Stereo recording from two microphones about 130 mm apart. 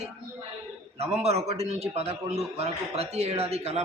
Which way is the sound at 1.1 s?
55° right (ahead or behind).